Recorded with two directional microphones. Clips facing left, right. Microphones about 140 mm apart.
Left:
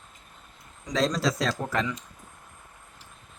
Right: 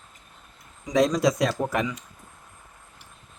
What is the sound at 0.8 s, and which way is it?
Speech, 15° right (ahead or behind).